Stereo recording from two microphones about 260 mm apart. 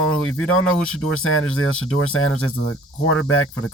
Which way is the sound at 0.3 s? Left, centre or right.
Left.